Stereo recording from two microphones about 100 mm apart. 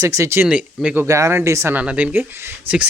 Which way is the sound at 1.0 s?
30° right (ahead or behind).